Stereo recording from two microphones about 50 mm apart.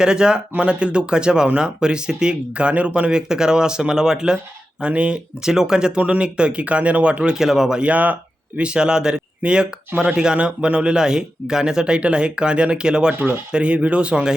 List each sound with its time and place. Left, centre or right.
0.0 s speech: centre
5.4 s speech: centre
7.3 s speech: centre
7.8 s speech: right